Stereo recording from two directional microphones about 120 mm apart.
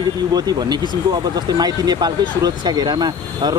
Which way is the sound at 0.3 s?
35° right (ahead or behind).